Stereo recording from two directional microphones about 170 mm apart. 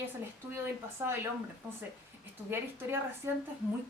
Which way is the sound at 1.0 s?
15° right (ahead or behind).